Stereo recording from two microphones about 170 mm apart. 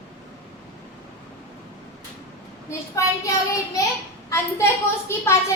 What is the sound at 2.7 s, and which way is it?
Child singing, 20° left (ahead or behind).